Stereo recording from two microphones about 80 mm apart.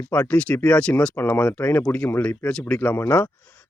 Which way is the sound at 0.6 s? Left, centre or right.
Centre.